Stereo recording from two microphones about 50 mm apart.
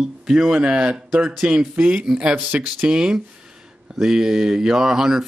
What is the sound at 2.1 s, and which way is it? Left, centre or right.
Speech, centre.